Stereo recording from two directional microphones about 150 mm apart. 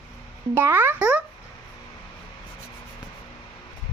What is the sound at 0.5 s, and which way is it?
Speech, 15° right (ahead or behind).